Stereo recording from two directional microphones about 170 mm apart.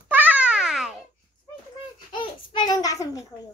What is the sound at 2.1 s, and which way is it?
Babbling, 25° left (ahead or behind).